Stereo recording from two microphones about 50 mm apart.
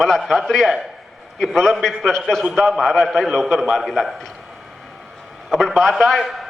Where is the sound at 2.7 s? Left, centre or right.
Centre.